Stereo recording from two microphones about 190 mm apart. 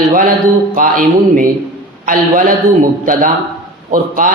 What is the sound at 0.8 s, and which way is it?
Speech, 45° right (ahead or behind).